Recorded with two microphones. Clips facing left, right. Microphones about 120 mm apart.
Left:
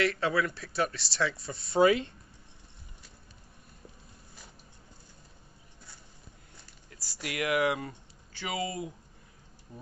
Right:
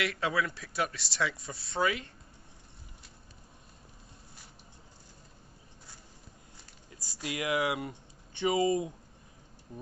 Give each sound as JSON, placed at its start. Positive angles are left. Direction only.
{"t": 0.0, "sound": "speech", "side_deg": -10}
{"t": 1.8, "sound": "speech", "side_deg": 30}
{"t": 6.9, "sound": "speech", "side_deg": -25}
{"t": 8.3, "sound": "speech", "side_deg": -25}